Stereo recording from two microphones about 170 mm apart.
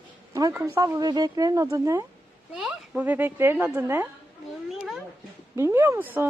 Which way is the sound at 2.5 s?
5° right (ahead or behind).